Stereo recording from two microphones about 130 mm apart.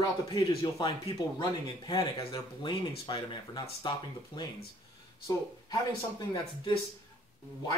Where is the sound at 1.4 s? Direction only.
30° left (ahead or behind).